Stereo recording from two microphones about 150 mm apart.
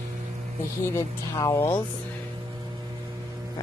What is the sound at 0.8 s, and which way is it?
Speech, 20° left (ahead or behind).